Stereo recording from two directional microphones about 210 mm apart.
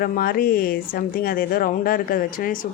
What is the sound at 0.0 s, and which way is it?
A woman's voice, 45° left (ahead or behind).